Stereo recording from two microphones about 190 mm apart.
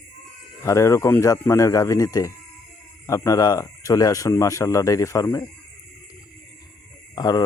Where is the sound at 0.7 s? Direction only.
15° left (ahead or behind).